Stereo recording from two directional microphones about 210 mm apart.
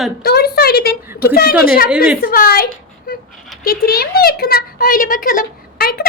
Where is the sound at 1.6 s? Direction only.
45° left (ahead or behind).